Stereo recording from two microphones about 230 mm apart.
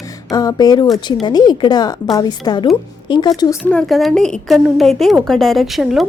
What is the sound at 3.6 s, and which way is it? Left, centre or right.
A woman's voice, centre.